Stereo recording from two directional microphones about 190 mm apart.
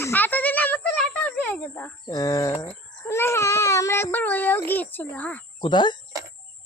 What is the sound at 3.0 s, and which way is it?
Baby cry, 10° left (ahead or behind).